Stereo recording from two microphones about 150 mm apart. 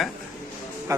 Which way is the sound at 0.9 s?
20° right (ahead or behind).